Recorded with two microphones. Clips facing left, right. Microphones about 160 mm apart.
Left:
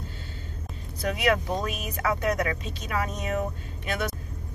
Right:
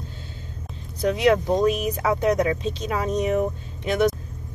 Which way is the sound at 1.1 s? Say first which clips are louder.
Right 6 dB; 25° right (ahead or behind).